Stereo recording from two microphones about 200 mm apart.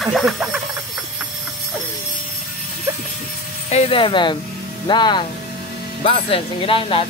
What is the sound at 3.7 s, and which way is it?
Speech, 30° left (ahead or behind).